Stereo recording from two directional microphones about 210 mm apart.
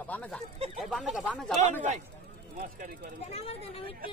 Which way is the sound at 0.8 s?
Centre (ahead or behind).